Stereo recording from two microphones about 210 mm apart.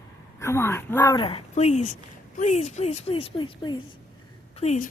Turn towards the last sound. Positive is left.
turn(degrees=30)  # may be behind; listen again after turning